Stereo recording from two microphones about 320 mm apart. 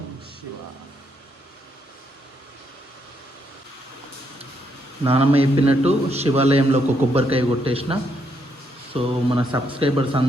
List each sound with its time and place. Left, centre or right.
5.0 s a man's voice: centre